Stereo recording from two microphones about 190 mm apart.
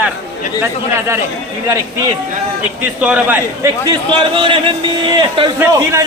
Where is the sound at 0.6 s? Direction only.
15° right (ahead or behind).